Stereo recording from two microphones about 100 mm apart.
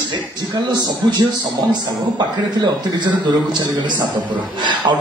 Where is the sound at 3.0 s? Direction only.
50° right (ahead or behind).